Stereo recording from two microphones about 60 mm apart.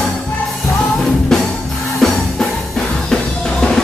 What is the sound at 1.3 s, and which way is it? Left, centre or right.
Music, centre.